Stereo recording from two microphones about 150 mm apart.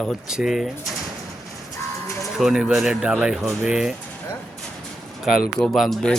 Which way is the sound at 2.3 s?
5° right (ahead or behind).